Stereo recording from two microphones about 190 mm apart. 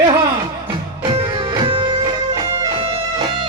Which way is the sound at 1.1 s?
25° right (ahead or behind).